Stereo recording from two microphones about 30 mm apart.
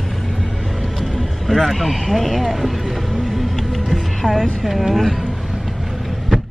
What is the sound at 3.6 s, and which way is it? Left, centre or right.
Music, centre.